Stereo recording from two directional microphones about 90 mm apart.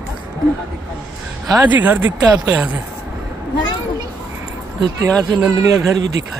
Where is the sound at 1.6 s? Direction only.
20° right (ahead or behind).